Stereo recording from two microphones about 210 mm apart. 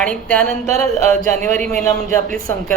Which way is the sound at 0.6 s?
35° right (ahead or behind).